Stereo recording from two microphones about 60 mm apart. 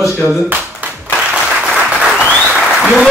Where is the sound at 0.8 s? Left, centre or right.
Right.